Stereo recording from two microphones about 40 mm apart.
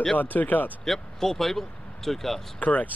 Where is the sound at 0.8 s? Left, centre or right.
Centre.